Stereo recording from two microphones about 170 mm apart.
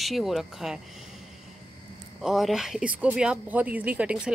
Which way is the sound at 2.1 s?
Centre (ahead or behind).